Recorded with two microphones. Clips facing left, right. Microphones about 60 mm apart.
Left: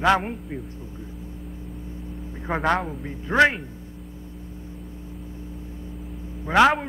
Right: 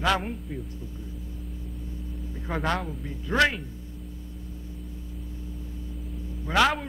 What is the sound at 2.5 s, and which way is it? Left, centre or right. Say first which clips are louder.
A man's voice: left 5 dB; left.